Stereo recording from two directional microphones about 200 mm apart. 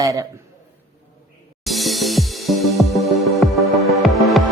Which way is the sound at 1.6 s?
Centre (ahead or behind).